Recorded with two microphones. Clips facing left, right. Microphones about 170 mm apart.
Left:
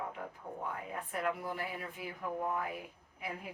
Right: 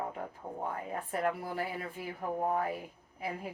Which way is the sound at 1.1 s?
40° right (ahead or behind).